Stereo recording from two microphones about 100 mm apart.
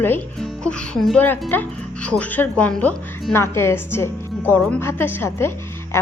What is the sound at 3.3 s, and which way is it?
A woman's voice, 25° left (ahead or behind).